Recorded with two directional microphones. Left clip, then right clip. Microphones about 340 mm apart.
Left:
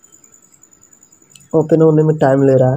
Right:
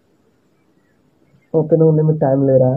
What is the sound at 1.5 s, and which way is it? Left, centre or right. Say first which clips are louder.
Speech: left 2 dB; left.